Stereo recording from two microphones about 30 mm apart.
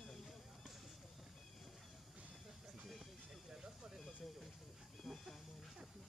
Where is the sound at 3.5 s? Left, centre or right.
Right.